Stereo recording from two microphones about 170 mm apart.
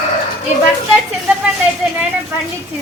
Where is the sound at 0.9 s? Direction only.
5° right (ahead or behind).